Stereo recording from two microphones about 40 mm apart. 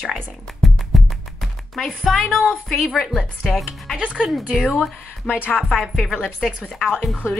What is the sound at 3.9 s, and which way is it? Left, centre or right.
Speech, right.